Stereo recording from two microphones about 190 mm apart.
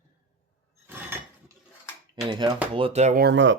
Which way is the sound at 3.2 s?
75° right (ahead or behind).